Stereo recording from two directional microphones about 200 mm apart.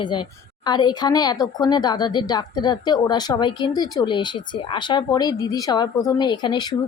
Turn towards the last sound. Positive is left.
turn(degrees=20)  # may be behind; listen again after turning